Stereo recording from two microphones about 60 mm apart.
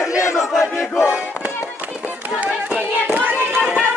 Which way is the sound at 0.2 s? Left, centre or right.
Left.